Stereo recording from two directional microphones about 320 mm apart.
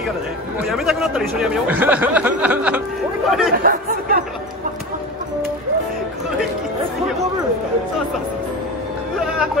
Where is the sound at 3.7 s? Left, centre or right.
Right.